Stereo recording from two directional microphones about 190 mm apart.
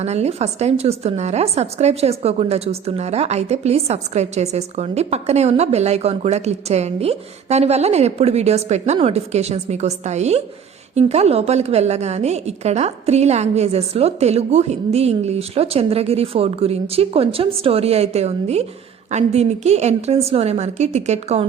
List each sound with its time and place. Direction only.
0.0 s a woman's voice: 35° right (ahead or behind)